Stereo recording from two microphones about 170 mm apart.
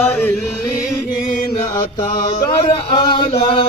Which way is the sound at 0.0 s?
5° left (ahead or behind).